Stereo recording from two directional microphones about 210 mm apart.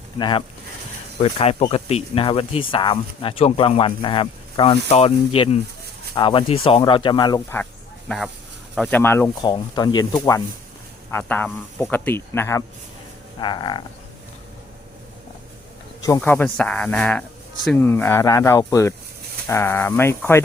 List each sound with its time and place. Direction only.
0.2 s speech: 20° left (ahead or behind)
16.0 s speech: 15° left (ahead or behind)